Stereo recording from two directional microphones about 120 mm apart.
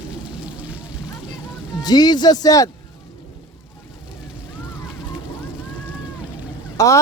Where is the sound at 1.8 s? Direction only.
35° left (ahead or behind).